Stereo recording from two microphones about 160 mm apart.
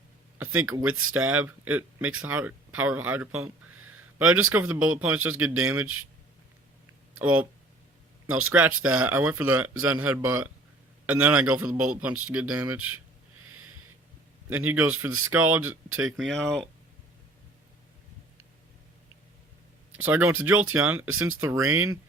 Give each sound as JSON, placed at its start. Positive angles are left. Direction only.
{"t": 0.3, "sound": "speech", "side_deg": -10}
{"t": 7.2, "sound": "speech", "side_deg": -10}
{"t": 14.5, "sound": "speech", "side_deg": -10}
{"t": 16.1, "sound": "speech", "side_deg": 5}
{"t": 20.0, "sound": "speech", "side_deg": -10}
{"t": 21.5, "sound": "speech", "side_deg": -20}